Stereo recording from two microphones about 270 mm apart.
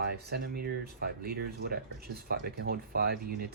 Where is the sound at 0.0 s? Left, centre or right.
Right.